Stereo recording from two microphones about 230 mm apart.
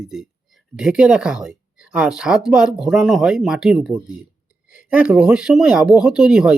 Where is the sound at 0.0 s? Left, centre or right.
Centre.